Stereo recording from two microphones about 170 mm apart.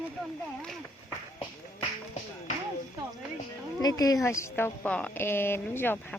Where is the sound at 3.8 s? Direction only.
20° left (ahead or behind).